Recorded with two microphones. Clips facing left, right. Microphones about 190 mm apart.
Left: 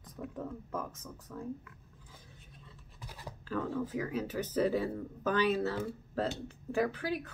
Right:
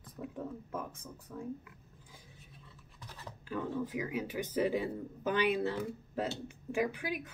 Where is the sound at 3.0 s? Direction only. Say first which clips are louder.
Left 2 dB; 10° left (ahead or behind).